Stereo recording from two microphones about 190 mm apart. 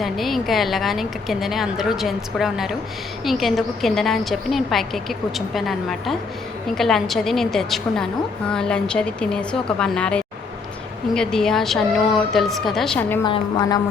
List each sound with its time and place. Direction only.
0.0 s a woman's voice: centre (ahead or behind)
13.2 s a woman's voice: 25° left (ahead or behind)